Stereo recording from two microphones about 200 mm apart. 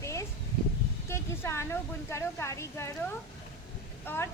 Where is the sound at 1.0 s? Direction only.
15° left (ahead or behind).